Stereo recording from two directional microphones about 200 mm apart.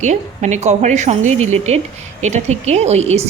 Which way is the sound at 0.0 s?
35° right (ahead or behind).